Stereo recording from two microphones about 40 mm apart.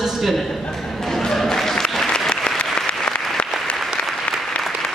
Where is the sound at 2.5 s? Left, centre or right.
Left.